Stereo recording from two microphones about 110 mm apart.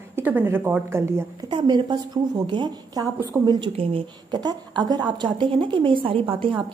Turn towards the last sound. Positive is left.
turn(degrees=-50)  # may be behind; listen again after turning